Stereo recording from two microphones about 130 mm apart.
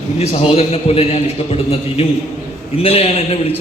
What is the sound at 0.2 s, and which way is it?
A man's voice, 50° left (ahead or behind).